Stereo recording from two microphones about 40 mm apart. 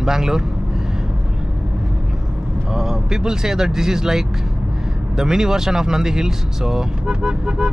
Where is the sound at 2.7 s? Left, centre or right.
Centre.